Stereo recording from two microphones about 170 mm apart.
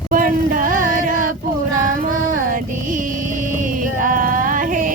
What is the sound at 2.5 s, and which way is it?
Music, 50° right (ahead or behind).